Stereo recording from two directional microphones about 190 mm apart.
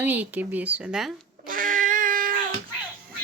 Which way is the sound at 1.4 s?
45° right (ahead or behind).